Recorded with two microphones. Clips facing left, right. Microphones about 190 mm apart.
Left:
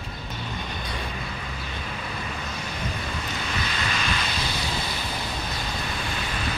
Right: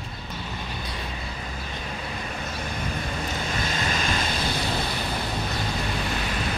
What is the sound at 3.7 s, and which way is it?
Vehicle, 45° right (ahead or behind).